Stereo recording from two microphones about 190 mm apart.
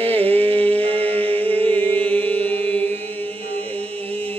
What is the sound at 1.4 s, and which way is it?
Music, 10° left (ahead or behind).